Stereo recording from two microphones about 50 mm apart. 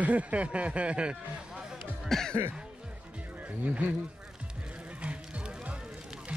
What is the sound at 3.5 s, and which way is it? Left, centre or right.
Speech, right.